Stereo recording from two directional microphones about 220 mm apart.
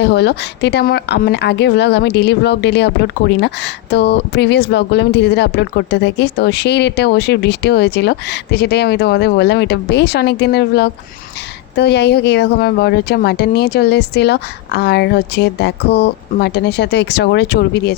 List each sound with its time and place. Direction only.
0.0 s speech: 50° left (ahead or behind)
3.9 s speech: 50° left (ahead or behind)